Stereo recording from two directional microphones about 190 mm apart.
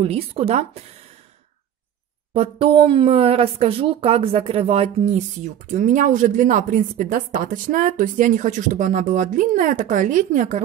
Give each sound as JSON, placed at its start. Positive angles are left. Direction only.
{"t": 0.0, "sound": "speech", "side_deg": -30}
{"t": 2.3, "sound": "speech", "side_deg": -30}